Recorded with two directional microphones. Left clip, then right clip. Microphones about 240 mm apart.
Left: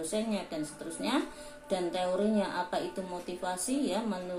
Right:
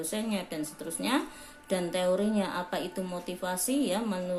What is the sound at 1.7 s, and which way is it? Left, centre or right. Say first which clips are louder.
Speech: right 3 dB; right.